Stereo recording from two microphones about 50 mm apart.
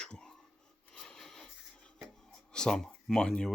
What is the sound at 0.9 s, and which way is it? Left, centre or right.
Rub, centre.